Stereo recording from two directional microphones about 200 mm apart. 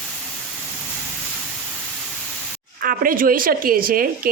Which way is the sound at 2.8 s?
45° right (ahead or behind).